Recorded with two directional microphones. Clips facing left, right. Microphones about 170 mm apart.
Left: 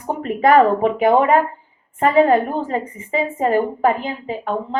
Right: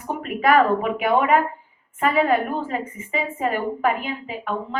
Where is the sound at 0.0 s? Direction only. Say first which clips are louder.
Left 4 dB; 30° left (ahead or behind).